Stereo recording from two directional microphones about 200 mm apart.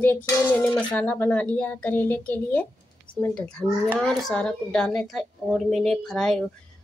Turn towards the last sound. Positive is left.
turn(degrees=5)  # may be behind; listen again after turning